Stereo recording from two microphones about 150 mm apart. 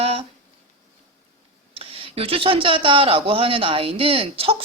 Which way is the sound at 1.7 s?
40° right (ahead or behind).